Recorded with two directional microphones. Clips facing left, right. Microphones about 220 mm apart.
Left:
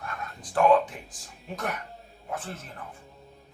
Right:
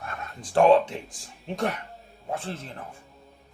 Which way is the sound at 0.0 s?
25° right (ahead or behind).